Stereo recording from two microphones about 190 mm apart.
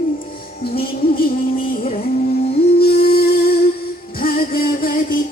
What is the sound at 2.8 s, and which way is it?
Music, 55° left (ahead or behind).